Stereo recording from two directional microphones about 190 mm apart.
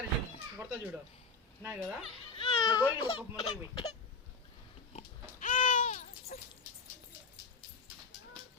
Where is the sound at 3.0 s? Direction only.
30° left (ahead or behind).